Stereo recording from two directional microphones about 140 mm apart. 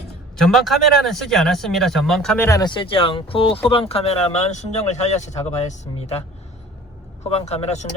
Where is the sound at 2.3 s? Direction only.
15° left (ahead or behind).